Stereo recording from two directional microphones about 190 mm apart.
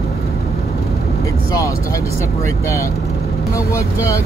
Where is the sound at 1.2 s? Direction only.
15° left (ahead or behind).